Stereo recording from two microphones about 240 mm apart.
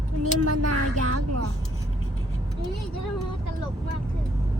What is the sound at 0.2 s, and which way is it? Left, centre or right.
Speech, right.